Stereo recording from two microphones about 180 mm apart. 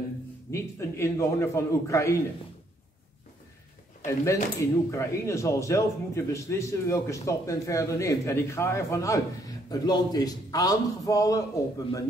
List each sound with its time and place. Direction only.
0.5 s speech: 15° left (ahead or behind)
4.0 s a man's voice: 15° left (ahead or behind)